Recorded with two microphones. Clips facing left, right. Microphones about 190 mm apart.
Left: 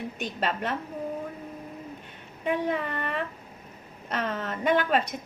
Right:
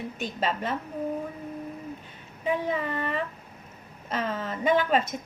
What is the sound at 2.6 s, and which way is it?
Speech, 5° right (ahead or behind).